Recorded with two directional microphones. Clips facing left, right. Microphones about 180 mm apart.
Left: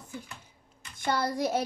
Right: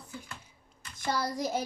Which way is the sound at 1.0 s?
60° left (ahead or behind).